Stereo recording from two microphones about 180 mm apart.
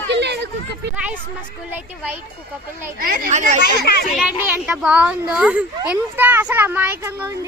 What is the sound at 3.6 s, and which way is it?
Speech, 60° left (ahead or behind).